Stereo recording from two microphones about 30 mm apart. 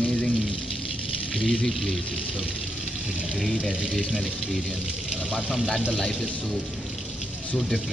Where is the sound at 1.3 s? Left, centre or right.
Centre.